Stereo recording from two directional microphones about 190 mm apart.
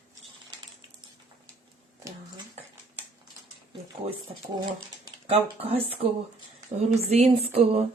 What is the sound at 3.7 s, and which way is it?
Speech, 25° right (ahead or behind).